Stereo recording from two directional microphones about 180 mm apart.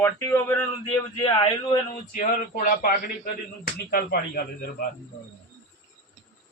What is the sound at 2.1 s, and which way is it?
A man's voice, 50° left (ahead or behind).